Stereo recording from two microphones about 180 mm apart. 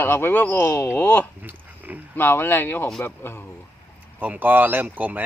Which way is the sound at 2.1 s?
10° left (ahead or behind).